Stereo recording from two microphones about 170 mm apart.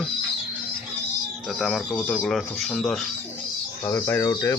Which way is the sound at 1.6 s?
Centre (ahead or behind).